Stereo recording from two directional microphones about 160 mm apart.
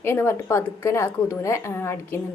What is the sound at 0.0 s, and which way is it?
A woman's voice, 15° left (ahead or behind).